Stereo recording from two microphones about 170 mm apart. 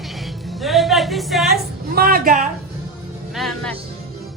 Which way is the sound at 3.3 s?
Centre (ahead or behind).